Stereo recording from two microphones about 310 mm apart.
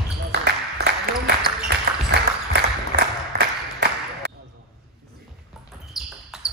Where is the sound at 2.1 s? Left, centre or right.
Right.